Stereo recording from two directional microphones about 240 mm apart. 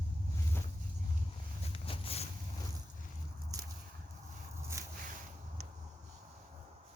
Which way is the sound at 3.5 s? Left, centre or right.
Centre.